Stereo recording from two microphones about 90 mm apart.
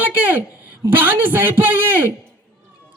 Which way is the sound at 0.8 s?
20° right (ahead or behind).